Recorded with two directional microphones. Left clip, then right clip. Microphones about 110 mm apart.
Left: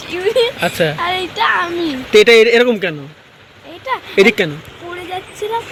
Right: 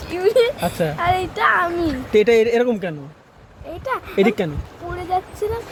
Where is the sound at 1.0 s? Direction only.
90° right.